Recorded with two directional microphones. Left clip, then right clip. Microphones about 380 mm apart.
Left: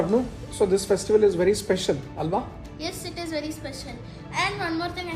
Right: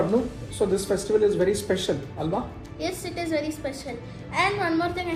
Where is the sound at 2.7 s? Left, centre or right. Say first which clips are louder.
Right 3 dB; centre.